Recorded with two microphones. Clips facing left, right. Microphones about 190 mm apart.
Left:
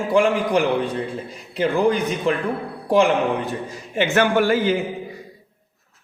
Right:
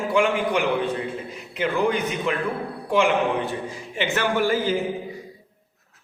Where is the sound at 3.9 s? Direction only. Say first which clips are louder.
Left 6 dB; 50° left (ahead or behind); by 4.8 s 70° left (ahead or behind).